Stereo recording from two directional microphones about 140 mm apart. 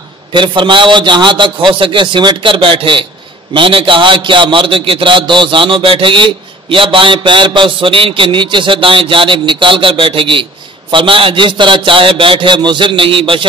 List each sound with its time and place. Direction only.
0.3 s a man's voice: 35° right (ahead or behind)